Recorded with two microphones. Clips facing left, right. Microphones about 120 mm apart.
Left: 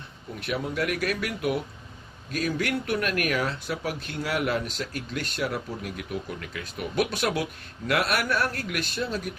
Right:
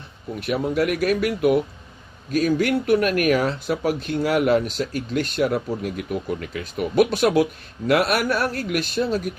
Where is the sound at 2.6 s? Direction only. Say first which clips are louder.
Right 8 dB; 20° right (ahead or behind).